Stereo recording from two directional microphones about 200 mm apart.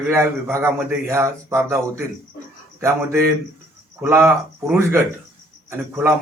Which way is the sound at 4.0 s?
10° right (ahead or behind).